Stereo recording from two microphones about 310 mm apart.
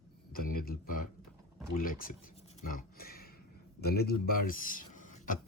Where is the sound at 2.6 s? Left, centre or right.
Left.